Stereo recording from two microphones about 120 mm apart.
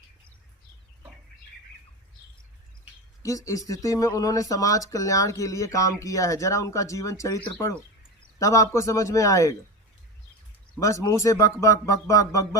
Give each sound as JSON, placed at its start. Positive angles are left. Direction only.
{"t": 3.2, "sound": "speech", "side_deg": 30}
{"t": 10.8, "sound": "speech", "side_deg": 25}